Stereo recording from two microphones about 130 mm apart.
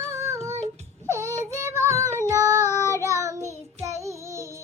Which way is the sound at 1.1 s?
20° right (ahead or behind).